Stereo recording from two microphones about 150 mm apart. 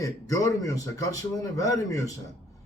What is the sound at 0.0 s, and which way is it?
Speech, 20° left (ahead or behind).